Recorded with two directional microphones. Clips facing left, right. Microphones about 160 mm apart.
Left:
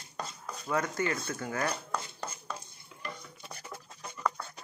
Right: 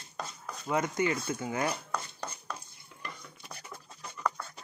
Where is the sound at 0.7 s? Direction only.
20° right (ahead or behind).